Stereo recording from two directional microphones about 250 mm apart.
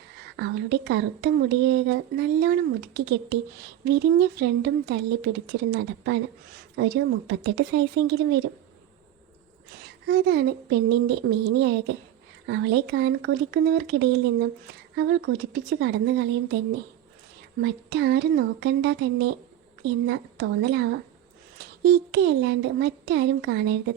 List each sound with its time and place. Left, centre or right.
0.3 s speech: right
10.1 s speech: right
17.6 s speech: right